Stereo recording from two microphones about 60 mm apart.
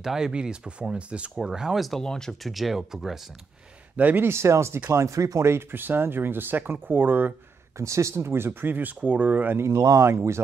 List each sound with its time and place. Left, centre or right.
0.0 s speech: centre
1.9 s speech: centre
2.5 s speech: centre
3.9 s speech: right
4.3 s speech: right
5.0 s speech: right
5.5 s speech: right
7.7 s speech: right
9.8 s speech: right
10.0 s speech: right